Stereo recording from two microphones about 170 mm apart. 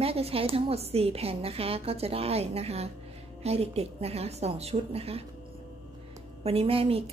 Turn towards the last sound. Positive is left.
turn(degrees=-35)  # may be behind; listen again after turning